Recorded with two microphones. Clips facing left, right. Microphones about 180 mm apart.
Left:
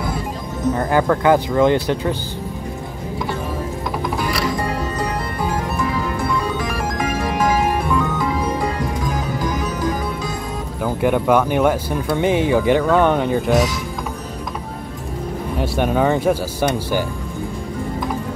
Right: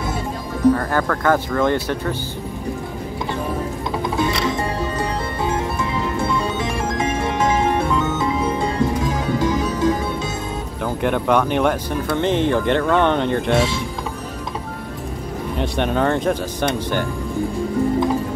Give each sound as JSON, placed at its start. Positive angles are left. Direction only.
{"t": 0.7, "sound": "speech", "side_deg": 20}
{"t": 4.2, "sound": "music", "side_deg": -25}
{"t": 10.8, "sound": "speech", "side_deg": 5}
{"t": 15.6, "sound": "speech", "side_deg": 5}